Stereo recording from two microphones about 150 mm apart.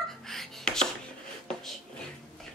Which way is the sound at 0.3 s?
5° left (ahead or behind).